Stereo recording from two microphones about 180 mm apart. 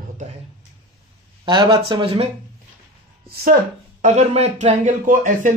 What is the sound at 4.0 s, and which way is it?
Speech, 40° right (ahead or behind).